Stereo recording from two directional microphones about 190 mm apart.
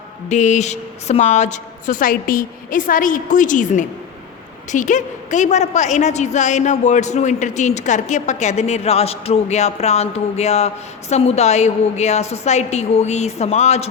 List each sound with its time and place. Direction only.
0.3 s a woman's voice: 40° left (ahead or behind)